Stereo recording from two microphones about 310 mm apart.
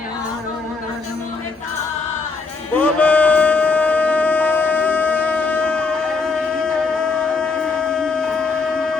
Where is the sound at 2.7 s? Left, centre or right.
Centre.